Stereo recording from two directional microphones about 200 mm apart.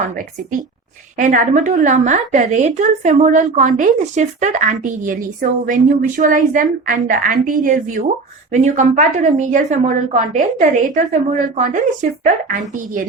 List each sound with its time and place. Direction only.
1.2 s a woman's voice: 40° right (ahead or behind)